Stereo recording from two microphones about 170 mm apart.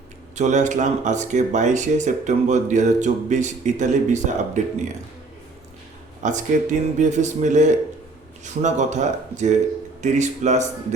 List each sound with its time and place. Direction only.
0.3 s speech: 45° right (ahead or behind)
6.2 s speech: 45° right (ahead or behind)